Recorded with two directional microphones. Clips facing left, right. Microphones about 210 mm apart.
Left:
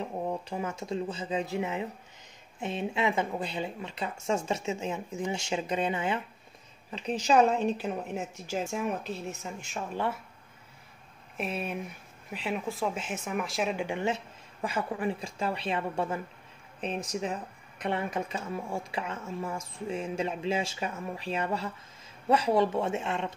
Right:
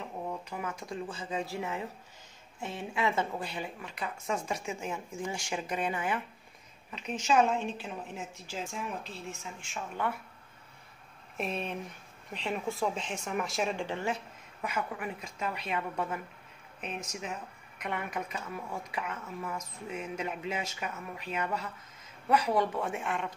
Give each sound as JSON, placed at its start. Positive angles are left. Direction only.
{"t": 0.3, "sound": "speech", "side_deg": 30}
{"t": 11.3, "sound": "speech", "side_deg": 5}